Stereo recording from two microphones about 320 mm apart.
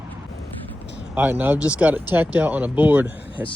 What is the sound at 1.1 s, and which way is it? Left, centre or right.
Speech, centre.